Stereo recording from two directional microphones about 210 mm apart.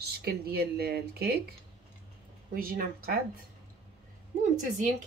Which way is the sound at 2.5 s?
45° right (ahead or behind).